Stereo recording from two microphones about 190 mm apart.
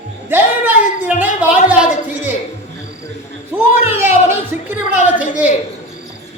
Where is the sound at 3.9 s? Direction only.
10° right (ahead or behind).